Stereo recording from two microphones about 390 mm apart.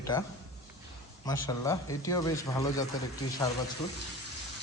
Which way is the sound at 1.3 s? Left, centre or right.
Centre.